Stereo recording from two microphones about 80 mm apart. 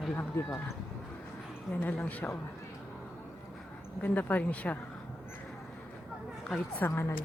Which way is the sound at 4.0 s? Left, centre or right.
Left.